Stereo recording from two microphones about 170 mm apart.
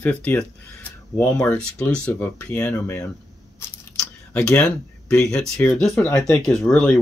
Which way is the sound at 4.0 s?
5° left (ahead or behind).